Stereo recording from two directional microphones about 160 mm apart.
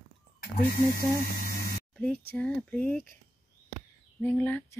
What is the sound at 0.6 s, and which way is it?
Speech, 65° left (ahead or behind).